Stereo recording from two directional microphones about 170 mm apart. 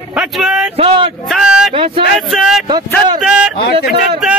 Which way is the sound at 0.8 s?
30° right (ahead or behind).